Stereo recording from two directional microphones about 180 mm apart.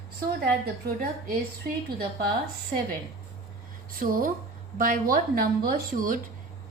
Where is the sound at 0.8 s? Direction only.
55° right (ahead or behind).